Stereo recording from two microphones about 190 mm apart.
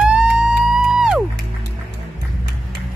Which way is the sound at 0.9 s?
5° right (ahead or behind).